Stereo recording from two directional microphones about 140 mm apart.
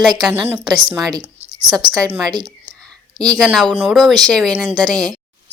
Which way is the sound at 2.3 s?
30° right (ahead or behind).